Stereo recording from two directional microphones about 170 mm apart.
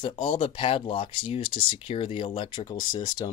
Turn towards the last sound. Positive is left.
turn(degrees=25)  # may be behind; listen again after turning